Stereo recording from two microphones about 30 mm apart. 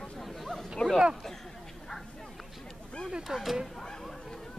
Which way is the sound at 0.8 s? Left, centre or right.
Left.